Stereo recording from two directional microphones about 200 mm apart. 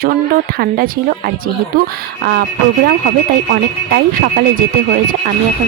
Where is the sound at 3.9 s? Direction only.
50° right (ahead or behind).